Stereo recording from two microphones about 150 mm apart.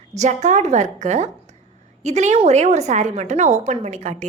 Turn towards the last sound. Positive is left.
turn(degrees=-50)  # may be behind; listen again after turning